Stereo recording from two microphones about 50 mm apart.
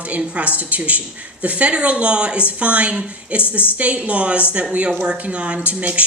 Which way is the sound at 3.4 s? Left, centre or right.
Left.